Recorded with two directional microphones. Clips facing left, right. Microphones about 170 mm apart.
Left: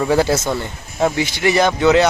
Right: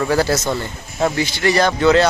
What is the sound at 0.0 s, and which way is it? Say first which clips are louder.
Speech: left 2 dB; 20° left (ahead or behind).